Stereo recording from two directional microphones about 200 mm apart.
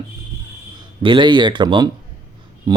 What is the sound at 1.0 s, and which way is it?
Speech, 25° right (ahead or behind).